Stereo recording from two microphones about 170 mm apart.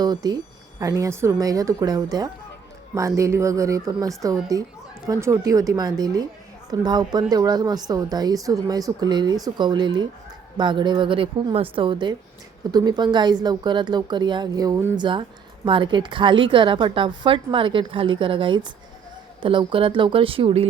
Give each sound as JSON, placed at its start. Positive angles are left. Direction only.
{"t": 0.0, "sound": "a woman's voice", "side_deg": -25}
{"t": 14.9, "sound": "a woman's voice", "side_deg": -30}